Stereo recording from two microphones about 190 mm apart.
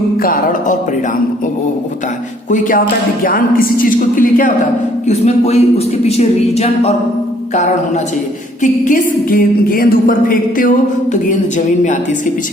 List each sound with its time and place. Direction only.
0.2 s a woman's voice: 50° left (ahead or behind)
2.5 s a woman's voice: 45° left (ahead or behind)
5.0 s speech: 35° left (ahead or behind)
8.6 s a woman's voice: 40° left (ahead or behind)